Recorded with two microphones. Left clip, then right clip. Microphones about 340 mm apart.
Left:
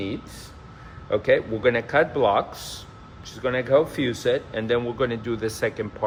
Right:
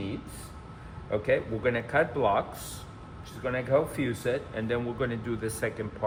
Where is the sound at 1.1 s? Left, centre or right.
Centre.